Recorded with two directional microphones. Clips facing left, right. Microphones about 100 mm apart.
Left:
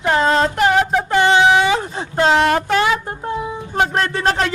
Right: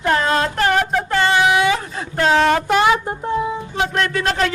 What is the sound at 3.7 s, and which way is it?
Speech, 45° left (ahead or behind).